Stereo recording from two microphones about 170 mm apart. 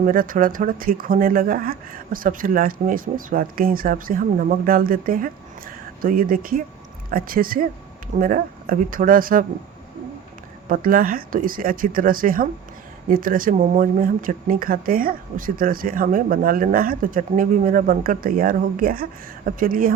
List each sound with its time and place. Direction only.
0.0 s speech: 55° right (ahead or behind)
10.7 s speech: 55° right (ahead or behind)